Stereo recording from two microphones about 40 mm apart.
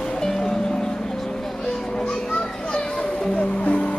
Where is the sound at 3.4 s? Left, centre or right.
Left.